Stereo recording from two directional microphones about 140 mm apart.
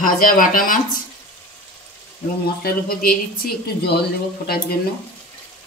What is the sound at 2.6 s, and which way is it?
Speech, 90° left.